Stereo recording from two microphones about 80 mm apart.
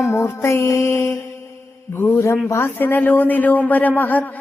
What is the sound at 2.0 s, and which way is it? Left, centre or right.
Speech, left.